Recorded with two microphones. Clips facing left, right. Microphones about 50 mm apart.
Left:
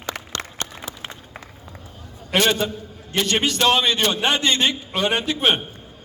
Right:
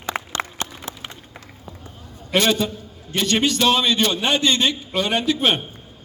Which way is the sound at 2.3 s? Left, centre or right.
Left.